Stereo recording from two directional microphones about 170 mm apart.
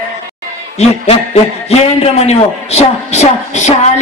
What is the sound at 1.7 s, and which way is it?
A man's voice, 35° left (ahead or behind).